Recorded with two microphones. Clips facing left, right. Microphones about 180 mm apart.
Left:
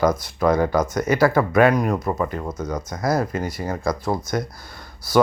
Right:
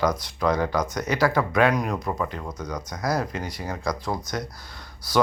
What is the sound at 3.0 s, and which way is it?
Speech, 50° left (ahead or behind).